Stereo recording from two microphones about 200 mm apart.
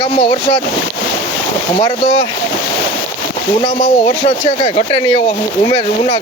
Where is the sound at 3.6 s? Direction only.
25° left (ahead or behind).